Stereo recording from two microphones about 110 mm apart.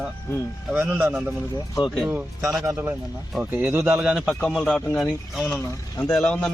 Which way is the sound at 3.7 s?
15° right (ahead or behind).